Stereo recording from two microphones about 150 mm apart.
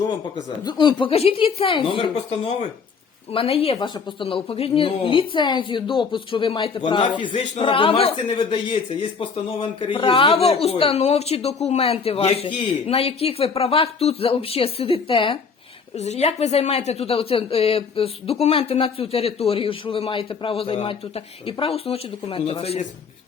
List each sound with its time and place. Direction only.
0.6 s speech: 30° left (ahead or behind)
16.0 s speech: 45° left (ahead or behind)